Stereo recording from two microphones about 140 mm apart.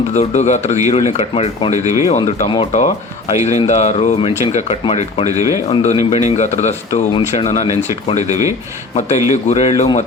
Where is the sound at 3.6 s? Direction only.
55° left (ahead or behind).